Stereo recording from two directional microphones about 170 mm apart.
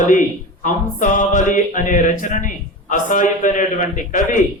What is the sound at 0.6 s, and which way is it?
A man's voice, 50° left (ahead or behind).